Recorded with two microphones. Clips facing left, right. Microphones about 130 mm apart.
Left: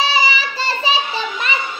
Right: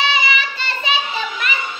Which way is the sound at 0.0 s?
35° left (ahead or behind).